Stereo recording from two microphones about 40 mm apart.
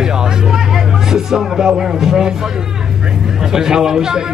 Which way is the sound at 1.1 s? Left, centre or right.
Centre.